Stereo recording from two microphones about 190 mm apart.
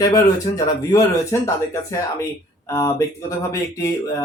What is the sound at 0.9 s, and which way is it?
Speech, 15° left (ahead or behind).